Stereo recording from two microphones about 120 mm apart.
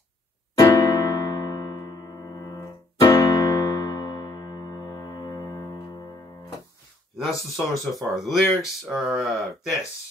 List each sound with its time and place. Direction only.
0.6 s electric piano: 30° left (ahead or behind)
7.2 s speech: centre (ahead or behind)